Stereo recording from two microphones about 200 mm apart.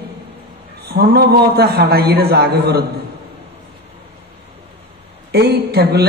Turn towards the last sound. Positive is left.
turn(degrees=-55)  # may be behind; listen again after turning